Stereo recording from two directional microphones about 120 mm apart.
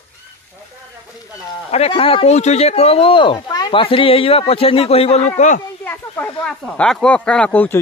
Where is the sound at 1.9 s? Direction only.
50° left (ahead or behind); by 5.6 s 80° left.